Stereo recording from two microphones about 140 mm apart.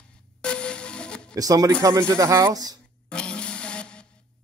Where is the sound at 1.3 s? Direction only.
25° right (ahead or behind).